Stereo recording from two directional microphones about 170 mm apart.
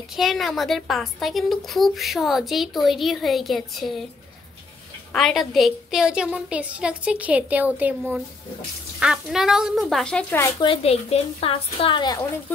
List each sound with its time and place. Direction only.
0.1 s a woman's voice: centre (ahead or behind)
5.1 s a woman's voice: centre (ahead or behind)
10.6 s a woman's voice: 35° left (ahead or behind)